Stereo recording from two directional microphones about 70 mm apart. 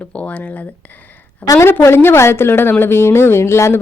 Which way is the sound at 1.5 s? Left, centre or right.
Left.